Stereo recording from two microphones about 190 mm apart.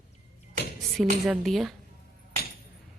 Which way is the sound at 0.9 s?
Centre (ahead or behind).